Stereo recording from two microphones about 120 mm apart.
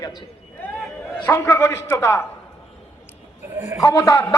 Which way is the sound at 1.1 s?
20° left (ahead or behind).